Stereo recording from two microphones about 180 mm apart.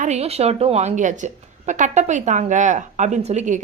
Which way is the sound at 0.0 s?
35° right (ahead or behind).